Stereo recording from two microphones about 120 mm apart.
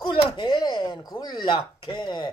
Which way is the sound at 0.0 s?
40° left (ahead or behind).